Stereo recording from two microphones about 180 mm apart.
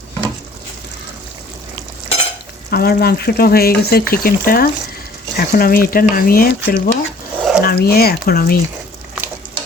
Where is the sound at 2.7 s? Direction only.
60° left (ahead or behind).